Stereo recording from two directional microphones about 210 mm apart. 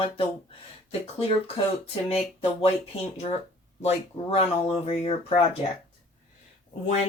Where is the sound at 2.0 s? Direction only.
25° left (ahead or behind).